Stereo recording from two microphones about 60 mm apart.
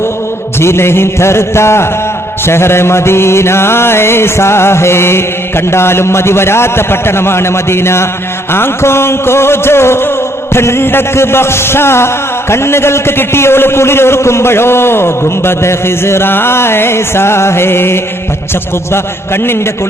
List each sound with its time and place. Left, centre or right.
0.6 s a man's voice: left